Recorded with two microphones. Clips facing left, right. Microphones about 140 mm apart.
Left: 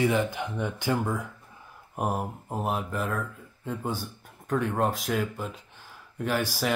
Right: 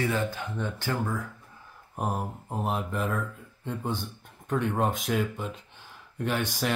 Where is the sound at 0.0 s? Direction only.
15° left (ahead or behind).